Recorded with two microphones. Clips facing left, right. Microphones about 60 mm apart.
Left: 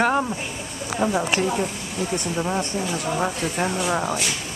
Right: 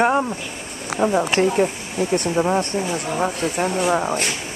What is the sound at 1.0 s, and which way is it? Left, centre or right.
Speech, centre.